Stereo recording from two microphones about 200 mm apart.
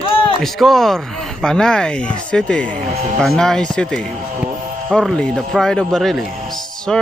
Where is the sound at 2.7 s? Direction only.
35° right (ahead or behind).